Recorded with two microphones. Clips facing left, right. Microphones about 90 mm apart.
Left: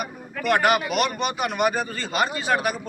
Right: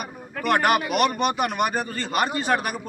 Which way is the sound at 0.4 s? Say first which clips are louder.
Even; 45° right (ahead or behind).